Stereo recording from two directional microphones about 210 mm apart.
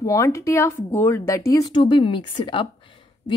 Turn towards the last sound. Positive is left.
turn(degrees=25)  # may be behind; listen again after turning